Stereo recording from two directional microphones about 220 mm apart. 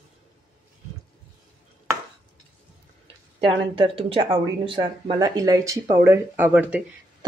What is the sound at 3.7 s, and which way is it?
Speech, 25° right (ahead or behind).